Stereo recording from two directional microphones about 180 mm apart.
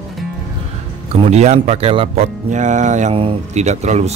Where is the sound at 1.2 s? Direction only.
35° right (ahead or behind).